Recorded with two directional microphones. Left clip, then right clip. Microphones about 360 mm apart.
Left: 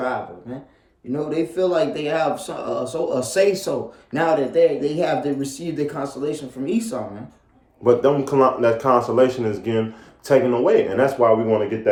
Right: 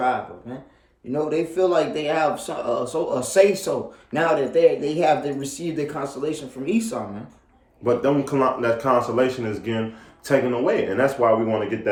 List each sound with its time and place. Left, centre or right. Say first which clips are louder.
1.1 s speech: even; centre
7.9 s speech: left 4 dB; centre